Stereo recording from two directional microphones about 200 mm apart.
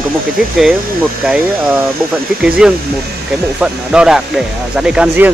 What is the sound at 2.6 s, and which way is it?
Speech, 5° right (ahead or behind).